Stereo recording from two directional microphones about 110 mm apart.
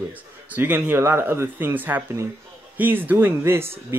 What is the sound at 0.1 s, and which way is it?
Speech, 15° right (ahead or behind).